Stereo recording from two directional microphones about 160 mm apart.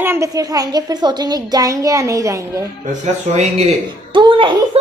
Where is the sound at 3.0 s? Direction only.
45° right (ahead or behind).